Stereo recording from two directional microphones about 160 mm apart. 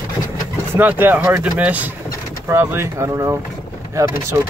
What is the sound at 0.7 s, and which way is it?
Speech, 10° right (ahead or behind).